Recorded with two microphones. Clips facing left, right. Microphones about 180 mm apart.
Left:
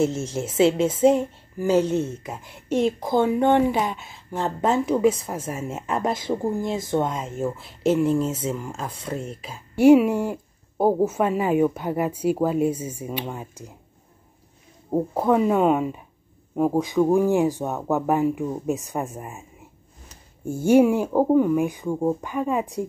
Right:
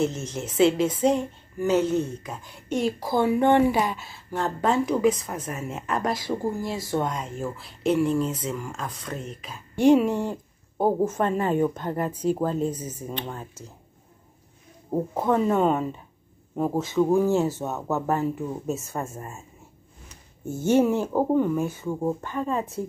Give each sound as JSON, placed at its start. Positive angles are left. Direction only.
{"t": 0.5, "sound": "speech", "side_deg": 25}
{"t": 1.6, "sound": "speech", "side_deg": 35}
{"t": 1.9, "sound": "speech", "side_deg": 25}
{"t": 3.6, "sound": "speech", "side_deg": 0}
{"t": 4.1, "sound": "speech", "side_deg": 20}
{"t": 9.4, "sound": "speech", "side_deg": 10}
{"t": 14.9, "sound": "speech", "side_deg": 10}
{"t": 20.4, "sound": "speech", "side_deg": 10}